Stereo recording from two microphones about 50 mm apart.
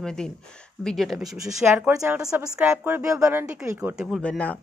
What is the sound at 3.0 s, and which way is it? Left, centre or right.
Speech, right.